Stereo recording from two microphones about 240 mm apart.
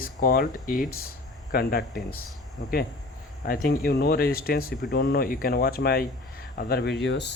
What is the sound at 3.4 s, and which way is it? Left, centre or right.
Speech, left.